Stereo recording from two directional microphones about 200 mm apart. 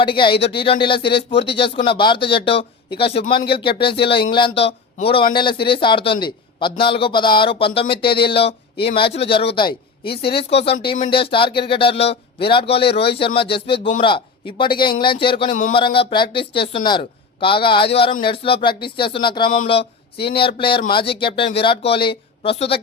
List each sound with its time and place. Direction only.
0.0 s a man's voice: 25° left (ahead or behind)